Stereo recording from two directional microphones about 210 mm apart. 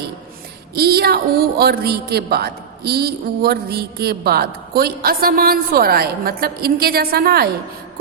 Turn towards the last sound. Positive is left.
turn(degrees=-45)  # may be behind; listen again after turning